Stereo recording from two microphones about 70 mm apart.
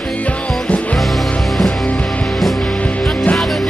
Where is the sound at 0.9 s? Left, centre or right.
Centre.